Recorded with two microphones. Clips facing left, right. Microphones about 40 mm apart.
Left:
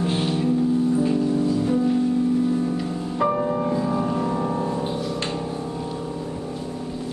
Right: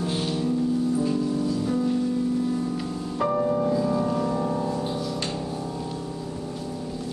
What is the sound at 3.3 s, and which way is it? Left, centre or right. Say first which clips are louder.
Music: even; left.